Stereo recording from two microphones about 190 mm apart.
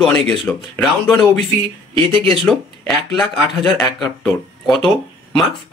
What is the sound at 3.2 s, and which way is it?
Speech, 5° left (ahead or behind).